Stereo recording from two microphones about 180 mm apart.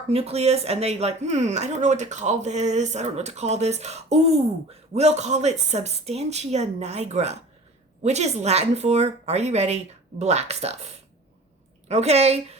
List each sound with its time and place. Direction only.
0.1 s speech: 35° right (ahead or behind)
11.9 s speech: 35° right (ahead or behind)